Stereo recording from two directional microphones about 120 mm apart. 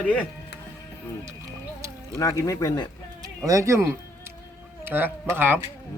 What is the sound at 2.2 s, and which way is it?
Speech, 25° left (ahead or behind).